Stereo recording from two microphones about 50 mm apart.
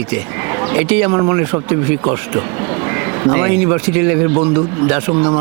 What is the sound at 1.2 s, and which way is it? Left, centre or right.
Speech, right.